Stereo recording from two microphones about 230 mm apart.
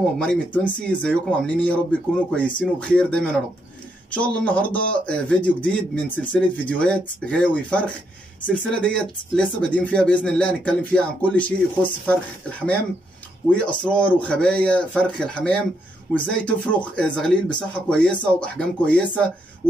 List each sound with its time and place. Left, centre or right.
0.2 s speech: centre
13.6 s speech: centre